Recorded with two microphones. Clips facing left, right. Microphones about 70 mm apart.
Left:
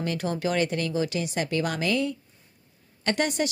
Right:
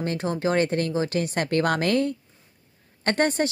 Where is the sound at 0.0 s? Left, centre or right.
Right.